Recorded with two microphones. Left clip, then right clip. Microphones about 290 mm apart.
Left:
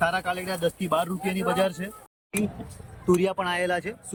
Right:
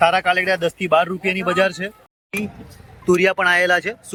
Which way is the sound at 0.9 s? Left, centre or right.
Centre.